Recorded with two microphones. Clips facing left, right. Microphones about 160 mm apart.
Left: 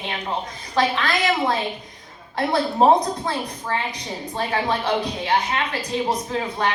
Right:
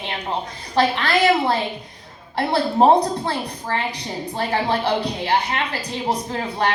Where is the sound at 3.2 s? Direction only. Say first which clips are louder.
Right 1 dB; 30° right (ahead or behind).